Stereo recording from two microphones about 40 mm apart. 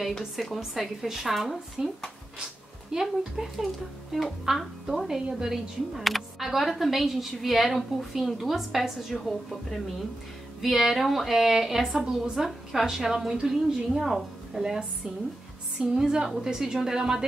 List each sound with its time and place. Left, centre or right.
0.6 s a woman's voice: centre
2.4 s a woman's voice: centre
9.1 s a woman's voice: centre
10.6 s a woman's voice: centre
15.8 s a woman's voice: centre